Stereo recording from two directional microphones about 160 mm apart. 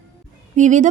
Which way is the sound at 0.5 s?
50° right (ahead or behind).